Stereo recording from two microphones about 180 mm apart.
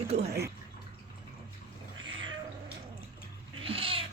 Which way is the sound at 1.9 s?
90° right.